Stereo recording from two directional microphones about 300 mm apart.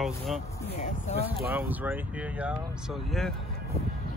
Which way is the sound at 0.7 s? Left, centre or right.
Left.